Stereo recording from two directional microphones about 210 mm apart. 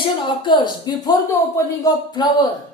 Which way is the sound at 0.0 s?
20° left (ahead or behind).